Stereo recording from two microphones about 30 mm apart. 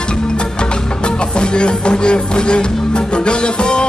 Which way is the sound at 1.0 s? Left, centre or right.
Left.